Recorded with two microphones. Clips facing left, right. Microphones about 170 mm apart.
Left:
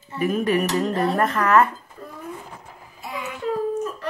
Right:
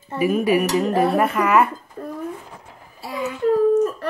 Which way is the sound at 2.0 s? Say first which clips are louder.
Right 12 dB; 50° right (ahead or behind).